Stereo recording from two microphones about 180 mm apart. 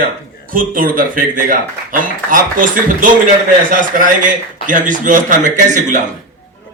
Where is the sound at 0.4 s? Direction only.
50° right (ahead or behind).